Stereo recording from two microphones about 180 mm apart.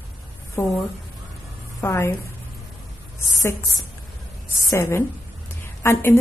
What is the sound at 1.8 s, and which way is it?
Speech, 15° left (ahead or behind).